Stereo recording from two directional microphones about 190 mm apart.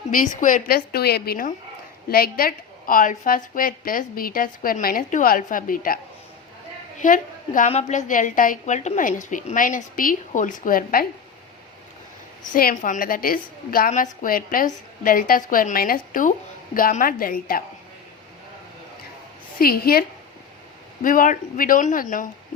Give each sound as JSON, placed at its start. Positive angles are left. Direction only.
{"t": 0.1, "sound": "a woman's voice", "side_deg": 45}
{"t": 7.0, "sound": "a woman's voice", "side_deg": 45}
{"t": 12.5, "sound": "a woman's voice", "side_deg": 45}
{"t": 19.5, "sound": "a woman's voice", "side_deg": 50}